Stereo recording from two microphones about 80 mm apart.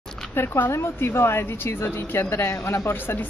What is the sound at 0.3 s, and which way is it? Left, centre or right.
A woman's voice, left.